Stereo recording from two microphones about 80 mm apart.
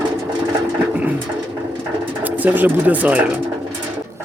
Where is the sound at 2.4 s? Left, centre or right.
Right.